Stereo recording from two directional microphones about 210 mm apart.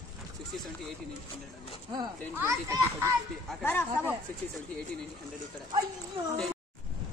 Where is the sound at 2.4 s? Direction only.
15° right (ahead or behind).